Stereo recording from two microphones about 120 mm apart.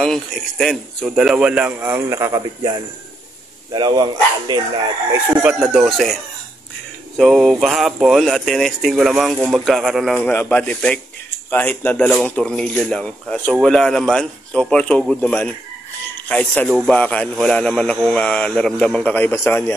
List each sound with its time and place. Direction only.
0.0 s speech: 5° left (ahead or behind); by 4.6 s 35° right (ahead or behind)
5.4 s speech: 10° right (ahead or behind)
7.2 s speech: centre (ahead or behind)
10.1 s speech: 10° left (ahead or behind)